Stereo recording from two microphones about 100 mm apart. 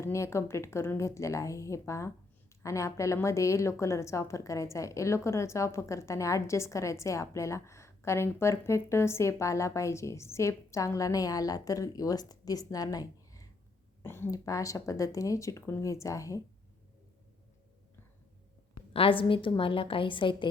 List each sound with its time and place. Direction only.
0.0 s a woman's voice: 30° left (ahead or behind)
14.0 s a woman's voice: 25° left (ahead or behind)
14.3 s a woman's voice: 35° left (ahead or behind)
18.9 s a woman's voice: 60° left (ahead or behind)